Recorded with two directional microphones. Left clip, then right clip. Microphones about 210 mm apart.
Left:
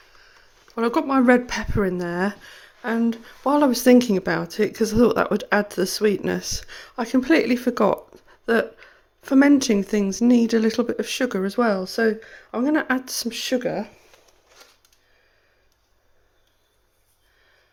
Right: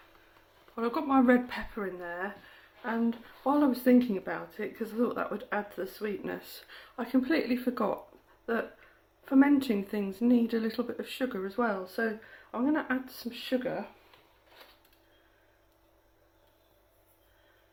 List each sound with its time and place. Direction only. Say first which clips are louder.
0.8 s speech: left 7 dB; 40° left (ahead or behind)